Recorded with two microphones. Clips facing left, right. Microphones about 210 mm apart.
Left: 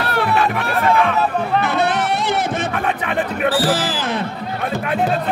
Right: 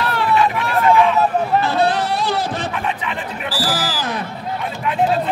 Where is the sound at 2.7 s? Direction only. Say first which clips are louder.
Left 3 dB; 55° left (ahead or behind).